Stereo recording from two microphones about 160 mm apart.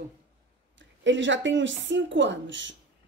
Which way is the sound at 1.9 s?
90° right.